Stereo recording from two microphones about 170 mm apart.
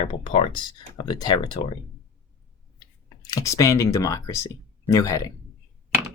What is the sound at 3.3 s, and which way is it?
Speech, 20° left (ahead or behind).